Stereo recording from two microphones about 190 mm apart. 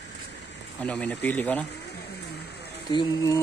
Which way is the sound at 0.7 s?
5° left (ahead or behind).